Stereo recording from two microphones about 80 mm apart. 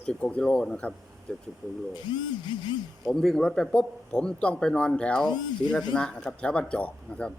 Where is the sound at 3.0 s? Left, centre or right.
Centre.